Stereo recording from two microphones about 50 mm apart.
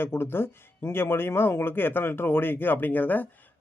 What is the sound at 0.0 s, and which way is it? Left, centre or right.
Speech, left.